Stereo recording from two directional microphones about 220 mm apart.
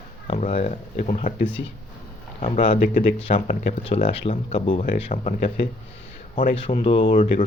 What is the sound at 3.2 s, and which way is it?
Speech, 25° left (ahead or behind).